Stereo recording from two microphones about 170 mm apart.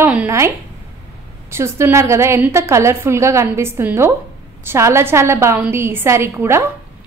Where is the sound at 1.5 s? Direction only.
15° right (ahead or behind).